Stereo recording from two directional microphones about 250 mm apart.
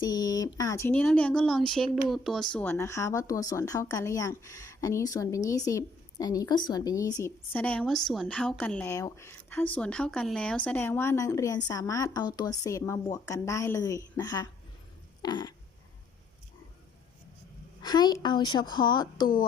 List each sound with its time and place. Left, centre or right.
0.0 s a woman's voice: centre
17.8 s a woman's voice: centre